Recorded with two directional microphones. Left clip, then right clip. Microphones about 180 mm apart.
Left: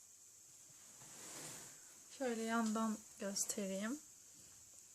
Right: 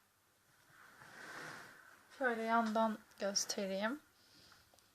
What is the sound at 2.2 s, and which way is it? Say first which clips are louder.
Speech: right 6 dB; 45° left (ahead or behind).